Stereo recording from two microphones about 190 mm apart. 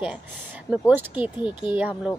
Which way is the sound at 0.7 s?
5° right (ahead or behind).